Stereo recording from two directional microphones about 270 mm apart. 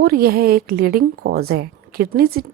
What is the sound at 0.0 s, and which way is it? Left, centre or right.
A woman's voice, right.